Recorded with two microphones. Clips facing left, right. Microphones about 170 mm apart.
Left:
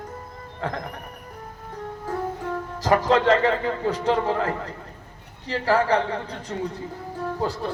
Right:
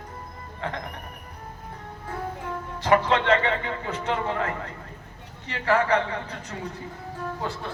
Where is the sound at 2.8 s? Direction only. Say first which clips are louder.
Left 2 dB; 40° left (ahead or behind).